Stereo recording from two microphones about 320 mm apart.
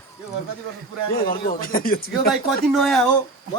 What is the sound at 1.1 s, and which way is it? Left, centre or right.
Speech, left.